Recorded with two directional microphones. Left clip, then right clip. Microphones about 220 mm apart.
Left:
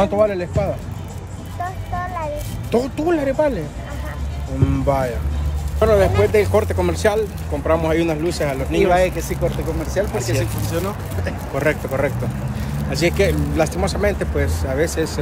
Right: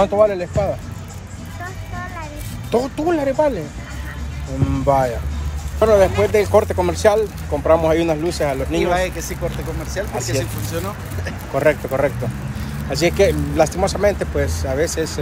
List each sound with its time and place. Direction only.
0.0 s speech: centre (ahead or behind)
2.7 s speech: 5° left (ahead or behind)
4.6 s speech: centre (ahead or behind)
8.9 s speech: 20° left (ahead or behind)
10.6 s speech: 15° left (ahead or behind)
11.5 s speech: centre (ahead or behind)